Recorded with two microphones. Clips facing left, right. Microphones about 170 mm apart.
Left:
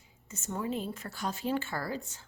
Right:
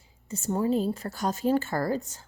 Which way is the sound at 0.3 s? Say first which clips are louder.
Right 9 dB; 35° right (ahead or behind).